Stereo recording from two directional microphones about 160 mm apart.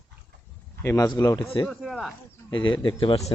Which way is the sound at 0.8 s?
20° left (ahead or behind).